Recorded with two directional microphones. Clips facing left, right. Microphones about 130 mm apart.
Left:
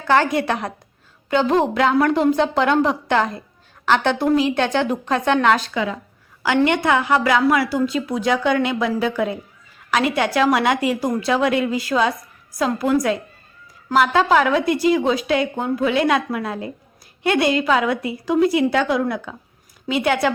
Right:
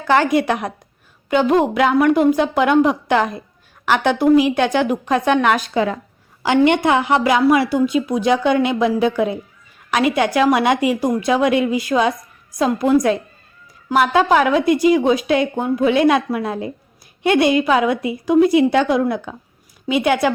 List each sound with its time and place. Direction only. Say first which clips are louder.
0.1 s a woman's voice: right 2 dB; 15° right (ahead or behind)
5.7 s a woman's voice: right 5 dB; 45° right (ahead or behind)
6.7 s a woman's voice: right 3 dB; 20° right (ahead or behind)